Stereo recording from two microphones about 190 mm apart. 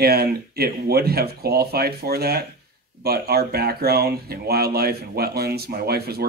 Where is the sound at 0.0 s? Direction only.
55° right (ahead or behind).